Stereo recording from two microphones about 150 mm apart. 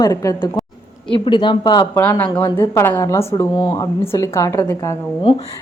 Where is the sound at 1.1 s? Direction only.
30° left (ahead or behind).